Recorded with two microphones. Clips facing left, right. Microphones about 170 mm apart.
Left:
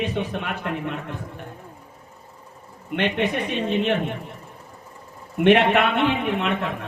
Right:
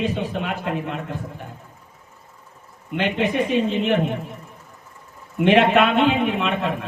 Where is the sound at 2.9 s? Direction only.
70° left (ahead or behind).